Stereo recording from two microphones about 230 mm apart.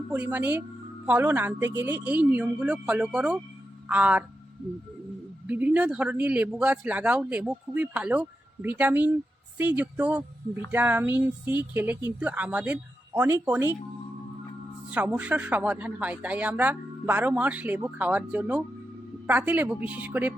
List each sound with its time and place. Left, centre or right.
0.1 s a man's voice: centre
5.5 s a man's voice: centre
14.9 s a man's voice: centre